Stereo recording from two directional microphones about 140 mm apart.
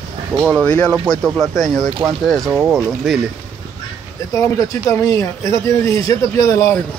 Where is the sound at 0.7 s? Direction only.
10° left (ahead or behind).